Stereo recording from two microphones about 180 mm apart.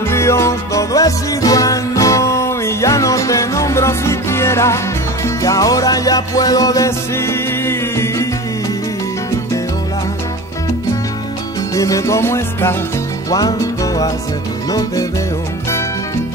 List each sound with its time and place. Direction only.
0.1 s music: 15° left (ahead or behind)
11.7 s music: 20° left (ahead or behind)